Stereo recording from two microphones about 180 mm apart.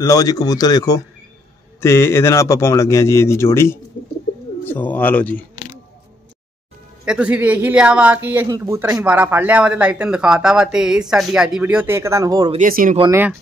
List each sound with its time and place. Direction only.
0.0 s a man's voice: 20° left (ahead or behind)
7.1 s speech: 5° right (ahead or behind)
12.4 s speech: 45° right (ahead or behind)